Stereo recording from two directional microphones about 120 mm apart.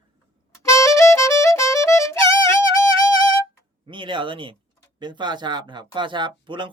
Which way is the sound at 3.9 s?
45° right (ahead or behind).